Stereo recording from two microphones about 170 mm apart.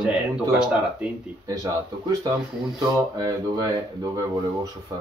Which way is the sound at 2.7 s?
25° right (ahead or behind).